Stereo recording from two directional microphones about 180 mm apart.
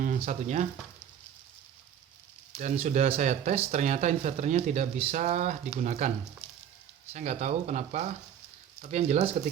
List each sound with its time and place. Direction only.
0.3 s speech: 40° right (ahead or behind)
2.6 s speech: 40° right (ahead or behind)
7.1 s speech: 40° right (ahead or behind)